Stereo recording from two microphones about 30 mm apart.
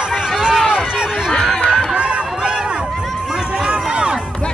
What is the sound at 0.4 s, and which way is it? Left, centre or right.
Run, right.